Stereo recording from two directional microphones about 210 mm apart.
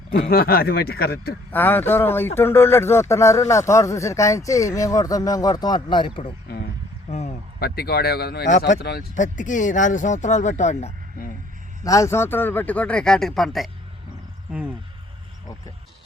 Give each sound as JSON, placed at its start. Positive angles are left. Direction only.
{"t": 0.1, "sound": "speech", "side_deg": 45}
{"t": 1.5, "sound": "speech", "side_deg": 10}
{"t": 7.6, "sound": "speech", "side_deg": 50}
{"t": 11.8, "sound": "speech", "side_deg": 15}